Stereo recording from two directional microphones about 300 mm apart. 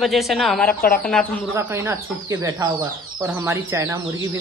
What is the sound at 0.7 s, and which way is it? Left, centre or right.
Speech, left.